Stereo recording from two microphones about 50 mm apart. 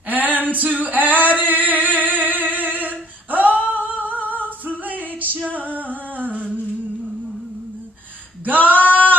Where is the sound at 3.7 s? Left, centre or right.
Right.